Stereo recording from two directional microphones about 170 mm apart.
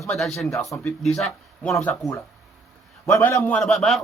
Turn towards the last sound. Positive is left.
turn(degrees=0)  # may be behind; listen again after turning